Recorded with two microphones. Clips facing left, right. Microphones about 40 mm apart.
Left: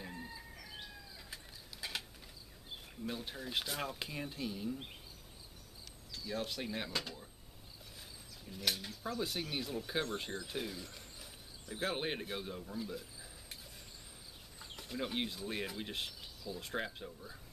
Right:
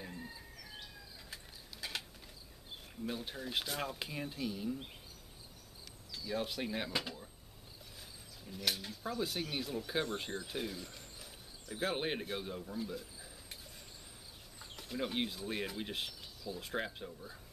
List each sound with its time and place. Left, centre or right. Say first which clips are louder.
0.0 s chicken: even; centre
1.3 s mechanisms: right 1 dB; centre
3.1 s speech: right 1 dB; centre
6.1 s speech: right 2 dB; centre
8.5 s speech: even; centre
14.6 s speech: right 1 dB; centre